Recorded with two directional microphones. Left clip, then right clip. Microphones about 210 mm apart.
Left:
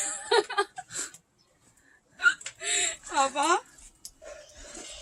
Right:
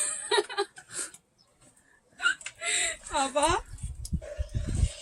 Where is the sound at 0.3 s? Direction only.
Centre (ahead or behind).